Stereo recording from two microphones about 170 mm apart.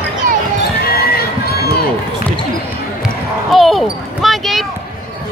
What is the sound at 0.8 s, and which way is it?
Run, 65° left (ahead or behind).